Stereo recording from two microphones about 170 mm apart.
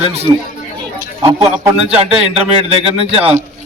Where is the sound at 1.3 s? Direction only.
15° right (ahead or behind).